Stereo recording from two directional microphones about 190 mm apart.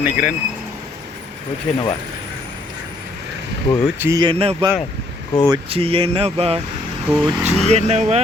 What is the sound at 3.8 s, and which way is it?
Speech, 10° right (ahead or behind).